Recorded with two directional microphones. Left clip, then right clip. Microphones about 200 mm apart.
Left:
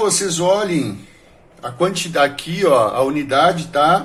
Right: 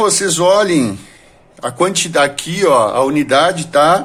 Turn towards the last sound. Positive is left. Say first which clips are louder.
# right 4 dB
turn(degrees=-40)  # may be behind; listen again after turning